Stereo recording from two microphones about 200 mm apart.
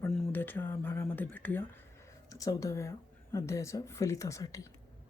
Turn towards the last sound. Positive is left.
turn(degrees=15)  # may be behind; listen again after turning